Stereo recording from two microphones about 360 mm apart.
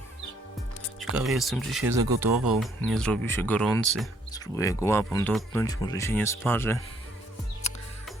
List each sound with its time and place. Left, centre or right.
1.1 s speech: centre
7.6 s music: centre